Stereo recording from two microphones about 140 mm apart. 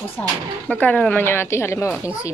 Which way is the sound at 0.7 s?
10° left (ahead or behind).